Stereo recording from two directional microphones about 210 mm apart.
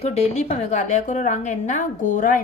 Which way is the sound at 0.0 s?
30° left (ahead or behind).